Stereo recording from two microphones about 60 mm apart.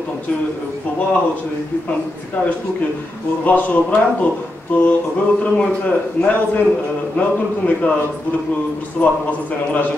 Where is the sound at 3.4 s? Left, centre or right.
Left.